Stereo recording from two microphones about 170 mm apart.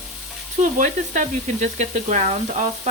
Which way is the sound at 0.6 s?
50° right (ahead or behind).